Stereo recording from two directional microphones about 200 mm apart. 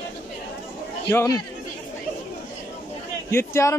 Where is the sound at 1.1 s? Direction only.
15° left (ahead or behind).